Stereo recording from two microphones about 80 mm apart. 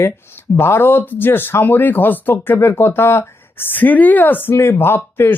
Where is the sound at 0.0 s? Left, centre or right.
Left.